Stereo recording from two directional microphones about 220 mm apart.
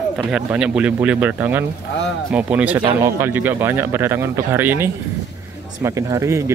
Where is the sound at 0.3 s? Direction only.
5° right (ahead or behind).